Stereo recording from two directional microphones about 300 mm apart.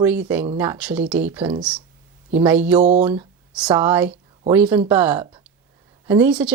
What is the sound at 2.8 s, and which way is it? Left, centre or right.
Speech, right.